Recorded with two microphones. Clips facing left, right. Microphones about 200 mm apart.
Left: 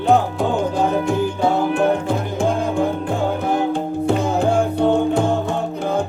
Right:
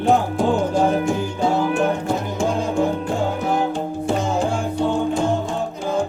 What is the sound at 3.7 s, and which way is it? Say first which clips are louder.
Music: left 3 dB; 60° left (ahead or behind).